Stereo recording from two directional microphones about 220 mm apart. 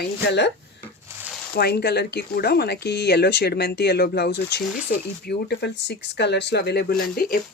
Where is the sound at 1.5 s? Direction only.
45° left (ahead or behind).